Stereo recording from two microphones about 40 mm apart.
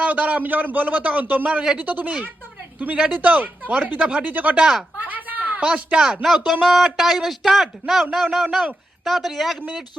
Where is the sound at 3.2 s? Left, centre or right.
Right.